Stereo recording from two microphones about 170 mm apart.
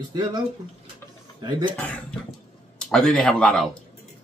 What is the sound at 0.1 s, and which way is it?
Speech, 25° right (ahead or behind).